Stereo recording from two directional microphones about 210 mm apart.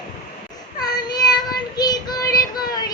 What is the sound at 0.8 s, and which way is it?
Child singing, 20° left (ahead or behind).